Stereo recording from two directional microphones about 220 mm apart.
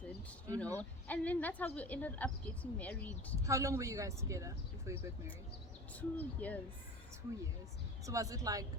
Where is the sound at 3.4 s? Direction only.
15° right (ahead or behind).